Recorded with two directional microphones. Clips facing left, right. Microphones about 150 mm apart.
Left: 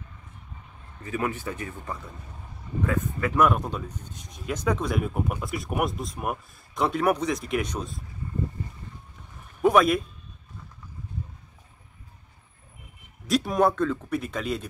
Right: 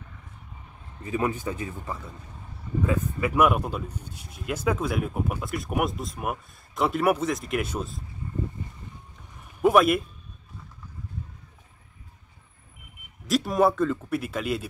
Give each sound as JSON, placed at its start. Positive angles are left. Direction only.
{"t": 1.0, "sound": "speech", "side_deg": -25}
{"t": 9.6, "sound": "speech", "side_deg": -5}
{"t": 13.3, "sound": "speech", "side_deg": 0}